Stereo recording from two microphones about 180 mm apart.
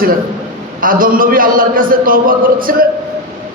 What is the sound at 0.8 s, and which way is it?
A man's voice, 50° right (ahead or behind).